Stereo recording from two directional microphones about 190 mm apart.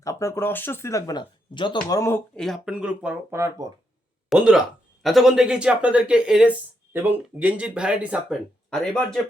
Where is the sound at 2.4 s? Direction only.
Centre (ahead or behind).